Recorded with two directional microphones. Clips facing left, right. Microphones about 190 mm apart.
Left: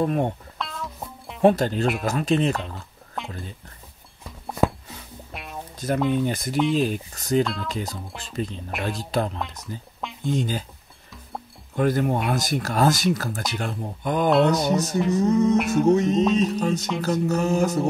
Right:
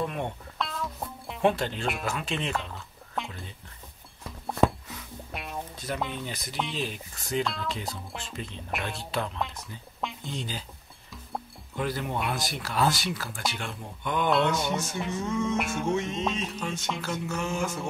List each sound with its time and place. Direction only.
0.0 s speech: 40° left (ahead or behind)
0.6 s music: centre (ahead or behind)
1.4 s speech: 40° left (ahead or behind)
3.2 s a sound: centre (ahead or behind)
5.3 s music: centre (ahead or behind)
5.9 s speech: centre (ahead or behind)
6.2 s speech: 50° left (ahead or behind)
6.5 s speech: 5° left (ahead or behind)
6.8 s speech: 40° left (ahead or behind)
9.4 s speech: centre (ahead or behind)
10.2 s speech: 50° left (ahead or behind)
11.7 s speech: 50° left (ahead or behind)